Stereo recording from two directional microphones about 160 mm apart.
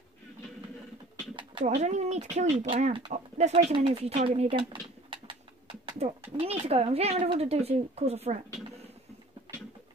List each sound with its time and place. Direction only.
1.6 s speech: 45° right (ahead or behind)
2.7 s speech: 30° right (ahead or behind)